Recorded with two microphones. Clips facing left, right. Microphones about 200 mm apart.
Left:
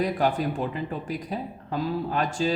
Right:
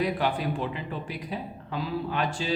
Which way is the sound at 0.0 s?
45° left (ahead or behind).